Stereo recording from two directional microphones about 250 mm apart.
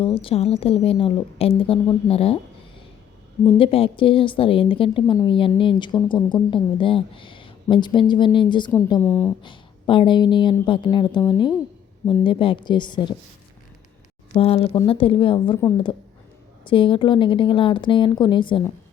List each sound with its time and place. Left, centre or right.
0.0 s a woman's voice: left
3.6 s a woman's voice: left
8.9 s a woman's voice: centre
9.4 s a woman's voice: centre
14.3 s a woman's voice: left